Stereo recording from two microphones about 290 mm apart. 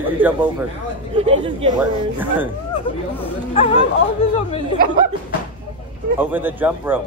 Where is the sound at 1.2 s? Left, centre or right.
Centre.